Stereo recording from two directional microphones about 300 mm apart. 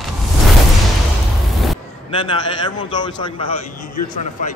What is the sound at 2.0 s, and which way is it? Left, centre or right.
A man's voice, centre.